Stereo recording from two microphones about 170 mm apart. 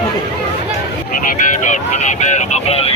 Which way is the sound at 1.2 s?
45° left (ahead or behind).